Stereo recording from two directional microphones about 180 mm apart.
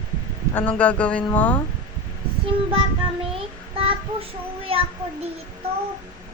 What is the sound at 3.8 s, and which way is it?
Child singing, 30° right (ahead or behind).